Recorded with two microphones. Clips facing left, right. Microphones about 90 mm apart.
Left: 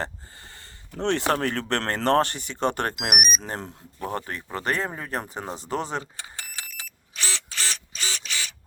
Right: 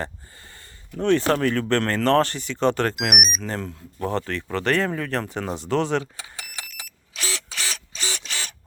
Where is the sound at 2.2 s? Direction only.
55° left (ahead or behind).